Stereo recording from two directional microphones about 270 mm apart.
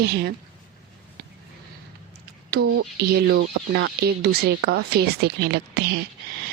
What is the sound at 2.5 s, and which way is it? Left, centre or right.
Speech, right.